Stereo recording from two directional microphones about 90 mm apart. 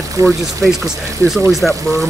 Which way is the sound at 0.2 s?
35° right (ahead or behind).